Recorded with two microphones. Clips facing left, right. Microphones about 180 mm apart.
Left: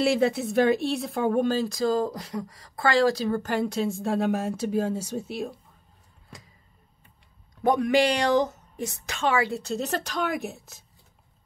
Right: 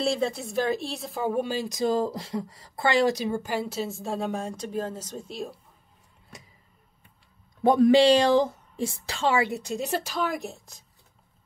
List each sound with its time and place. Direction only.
0.3 s a woman's voice: centre (ahead or behind)
7.6 s a woman's voice: 30° right (ahead or behind); by 10.8 s 5° left (ahead or behind)